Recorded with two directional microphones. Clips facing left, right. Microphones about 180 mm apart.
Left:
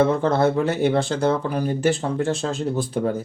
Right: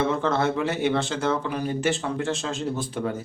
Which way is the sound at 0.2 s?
35° left (ahead or behind).